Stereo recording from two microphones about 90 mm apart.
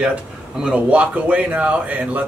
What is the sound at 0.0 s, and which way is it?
Speech, 10° right (ahead or behind).